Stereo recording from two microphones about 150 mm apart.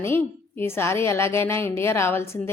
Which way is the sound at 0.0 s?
15° left (ahead or behind).